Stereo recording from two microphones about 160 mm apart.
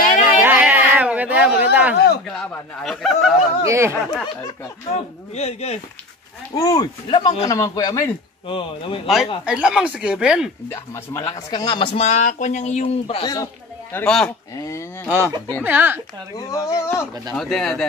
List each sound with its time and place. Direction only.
0.4 s a sound: 10° right (ahead or behind)
2.8 s speech: centre (ahead or behind)
3.6 s speech: 15° right (ahead or behind)
4.9 s a man's voice: 40° left (ahead or behind)
6.5 s speech: 25° left (ahead or behind)
8.5 s a man's voice: 35° left (ahead or behind)
9.0 s speech: centre (ahead or behind)
10.7 s a man's voice: 20° left (ahead or behind); by 13.3 s 35° left (ahead or behind)
13.9 s speech: 5° left (ahead or behind)
14.5 s speech: 20° left (ahead or behind)
15.0 s speech: 15° right (ahead or behind)
16.3 s speech: 20° left (ahead or behind)
17.3 s speech: 5° left (ahead or behind)